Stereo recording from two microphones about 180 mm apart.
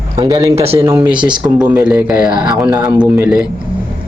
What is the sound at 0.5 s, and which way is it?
Speech, 35° right (ahead or behind).